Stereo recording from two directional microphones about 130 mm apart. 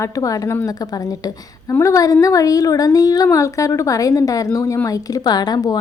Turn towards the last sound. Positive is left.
turn(degrees=30)  # may be behind; listen again after turning